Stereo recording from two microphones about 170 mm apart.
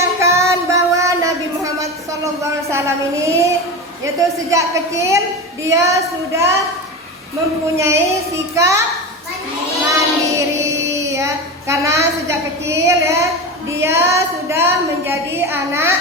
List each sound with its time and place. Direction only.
0.2 s child singing: 15° right (ahead or behind)
4.5 s a woman's voice: 20° right (ahead or behind)
7.8 s a woman's voice: 15° right (ahead or behind)
9.9 s music: 15° right (ahead or behind)
10.9 s a woman's voice: 20° right (ahead or behind)